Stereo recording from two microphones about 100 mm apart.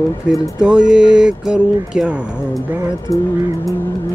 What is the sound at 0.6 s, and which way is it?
Speech, 5° right (ahead or behind).